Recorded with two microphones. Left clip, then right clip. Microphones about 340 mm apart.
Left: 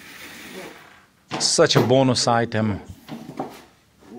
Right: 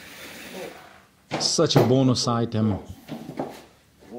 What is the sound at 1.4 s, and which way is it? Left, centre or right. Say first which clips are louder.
Speech: left 3 dB; left.